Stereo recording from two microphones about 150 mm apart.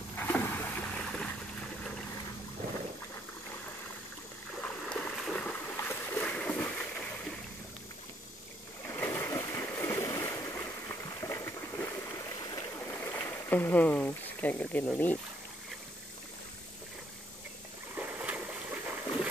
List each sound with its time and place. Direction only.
0.2 s boat: 15° left (ahead or behind)
4.6 s a sound: 5° left (ahead or behind)
8.8 s splash: 15° left (ahead or behind)
12.7 s stream: 15° left (ahead or behind)
17.9 s boat: 10° right (ahead or behind)